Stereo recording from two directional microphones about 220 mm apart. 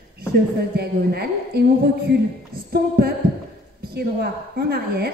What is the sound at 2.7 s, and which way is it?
A woman's voice, 45° right (ahead or behind).